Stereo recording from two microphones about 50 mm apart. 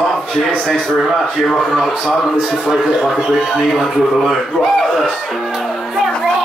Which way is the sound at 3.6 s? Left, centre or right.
Centre.